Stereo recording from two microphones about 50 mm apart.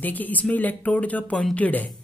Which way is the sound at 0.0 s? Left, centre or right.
Left.